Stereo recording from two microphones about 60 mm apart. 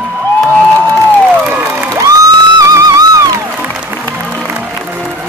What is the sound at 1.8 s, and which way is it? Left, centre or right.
Music, right.